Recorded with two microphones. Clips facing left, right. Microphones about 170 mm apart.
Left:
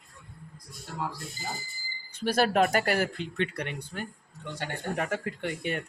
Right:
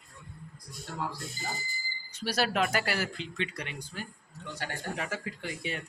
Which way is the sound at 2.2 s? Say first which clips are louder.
Left 5 dB; 50° left (ahead or behind).